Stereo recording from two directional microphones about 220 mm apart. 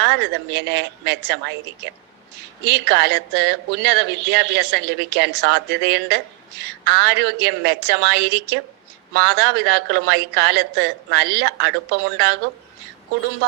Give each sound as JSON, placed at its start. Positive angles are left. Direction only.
{"t": 0.0, "sound": "speech", "side_deg": -50}